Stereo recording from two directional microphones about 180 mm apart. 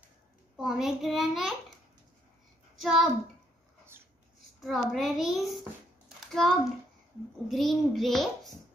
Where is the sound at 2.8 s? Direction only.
Centre (ahead or behind).